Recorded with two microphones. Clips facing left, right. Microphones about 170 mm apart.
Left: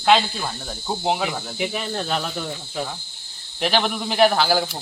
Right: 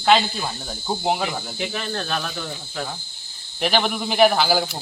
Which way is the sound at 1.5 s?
15° left (ahead or behind).